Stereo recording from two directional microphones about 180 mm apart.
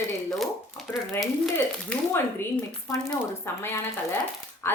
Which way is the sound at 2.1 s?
10° left (ahead or behind).